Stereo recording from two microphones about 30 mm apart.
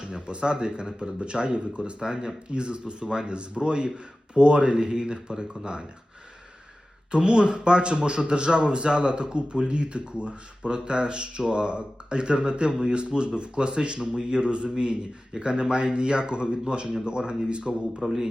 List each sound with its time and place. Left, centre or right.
0.0 s speech: right
2.5 s speech: right
7.1 s speech: right